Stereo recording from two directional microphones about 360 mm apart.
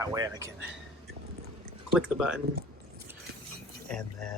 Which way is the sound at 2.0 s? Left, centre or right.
Centre.